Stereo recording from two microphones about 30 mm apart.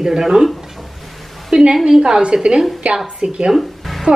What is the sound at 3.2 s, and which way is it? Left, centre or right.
Speech, right.